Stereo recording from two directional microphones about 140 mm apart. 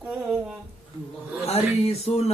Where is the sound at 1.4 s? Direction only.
50° left (ahead or behind).